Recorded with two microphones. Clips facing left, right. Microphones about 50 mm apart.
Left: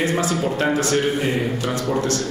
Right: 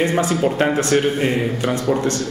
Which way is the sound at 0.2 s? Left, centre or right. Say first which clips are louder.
Right 3 dB; right.